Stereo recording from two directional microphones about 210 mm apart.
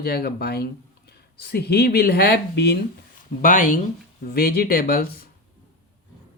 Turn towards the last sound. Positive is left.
turn(degrees=45)  # may be behind; listen again after turning